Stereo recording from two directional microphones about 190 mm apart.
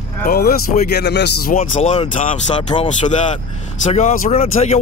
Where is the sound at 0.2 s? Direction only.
50° left (ahead or behind).